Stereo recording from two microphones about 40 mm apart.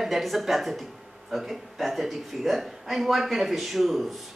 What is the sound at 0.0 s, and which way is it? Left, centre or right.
Speech, centre.